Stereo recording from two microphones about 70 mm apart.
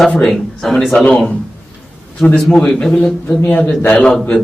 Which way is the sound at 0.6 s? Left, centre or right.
Centre.